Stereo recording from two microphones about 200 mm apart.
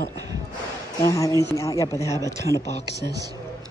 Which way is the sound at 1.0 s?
15° left (ahead or behind).